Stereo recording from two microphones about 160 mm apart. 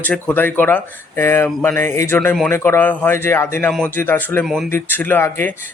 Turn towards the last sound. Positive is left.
turn(degrees=15)  # may be behind; listen again after turning